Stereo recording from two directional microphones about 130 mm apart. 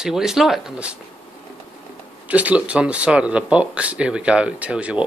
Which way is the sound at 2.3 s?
10° right (ahead or behind).